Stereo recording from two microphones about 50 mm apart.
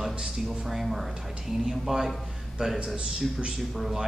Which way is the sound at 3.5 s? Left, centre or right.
Centre.